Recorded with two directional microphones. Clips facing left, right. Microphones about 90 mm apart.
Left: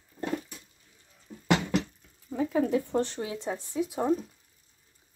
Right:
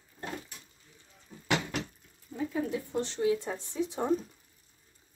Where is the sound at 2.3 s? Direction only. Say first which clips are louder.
Left 6 dB; 75° left (ahead or behind).